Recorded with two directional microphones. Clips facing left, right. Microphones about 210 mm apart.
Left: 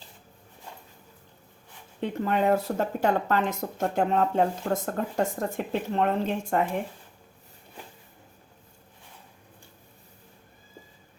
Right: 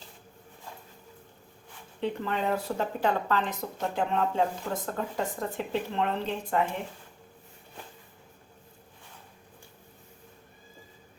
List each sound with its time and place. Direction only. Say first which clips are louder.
2.0 s speech: left 4 dB; 45° left (ahead or behind)